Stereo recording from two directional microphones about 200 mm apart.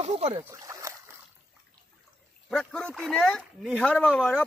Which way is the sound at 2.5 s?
5° left (ahead or behind).